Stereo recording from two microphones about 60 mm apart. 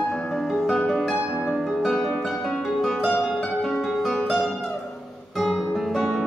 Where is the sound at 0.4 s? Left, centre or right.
Centre.